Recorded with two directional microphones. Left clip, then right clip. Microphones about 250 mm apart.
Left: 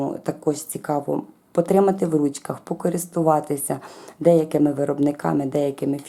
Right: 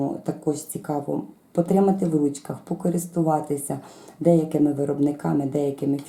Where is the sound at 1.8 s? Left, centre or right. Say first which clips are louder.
Left 2 dB; centre.